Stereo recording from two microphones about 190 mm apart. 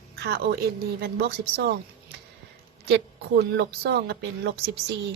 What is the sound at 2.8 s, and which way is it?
Speech, 60° right (ahead or behind).